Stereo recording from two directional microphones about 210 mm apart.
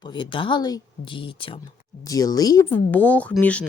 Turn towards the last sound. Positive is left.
turn(degrees=5)  # may be behind; listen again after turning